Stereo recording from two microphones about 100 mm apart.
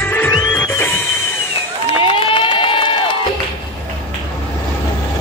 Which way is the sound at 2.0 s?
60° left (ahead or behind).